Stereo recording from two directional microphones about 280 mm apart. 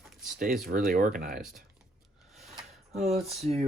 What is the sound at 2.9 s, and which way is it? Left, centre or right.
Speech, right.